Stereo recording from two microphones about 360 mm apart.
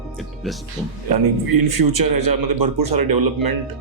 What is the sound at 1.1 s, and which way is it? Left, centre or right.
Speech, right.